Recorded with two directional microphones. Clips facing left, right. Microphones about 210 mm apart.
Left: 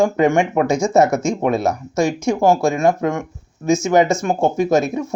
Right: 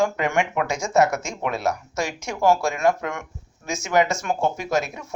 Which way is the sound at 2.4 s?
25° left (ahead or behind).